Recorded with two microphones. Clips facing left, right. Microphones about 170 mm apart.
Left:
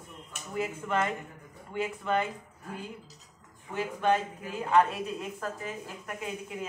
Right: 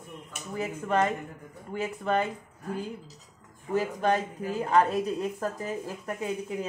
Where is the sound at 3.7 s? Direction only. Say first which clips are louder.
Right 2 dB; 40° right (ahead or behind).